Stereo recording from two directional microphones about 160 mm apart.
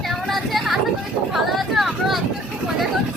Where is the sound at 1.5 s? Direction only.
Centre (ahead or behind).